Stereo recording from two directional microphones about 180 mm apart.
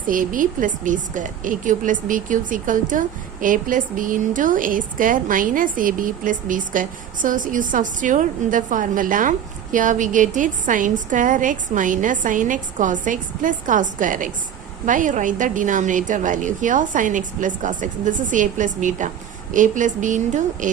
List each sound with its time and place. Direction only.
0.1 s a woman's voice: 50° right (ahead or behind)